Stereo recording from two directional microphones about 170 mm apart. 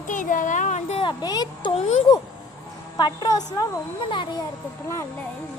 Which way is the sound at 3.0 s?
25° left (ahead or behind).